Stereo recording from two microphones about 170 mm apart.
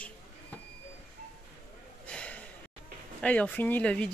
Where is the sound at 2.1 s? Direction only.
5° left (ahead or behind).